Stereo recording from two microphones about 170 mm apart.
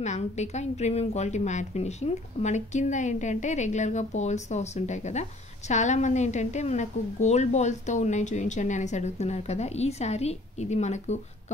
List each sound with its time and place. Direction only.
0.0 s a woman's voice: 40° left (ahead or behind)